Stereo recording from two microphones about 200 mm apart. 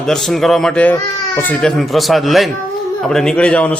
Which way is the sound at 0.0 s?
Centre (ahead or behind).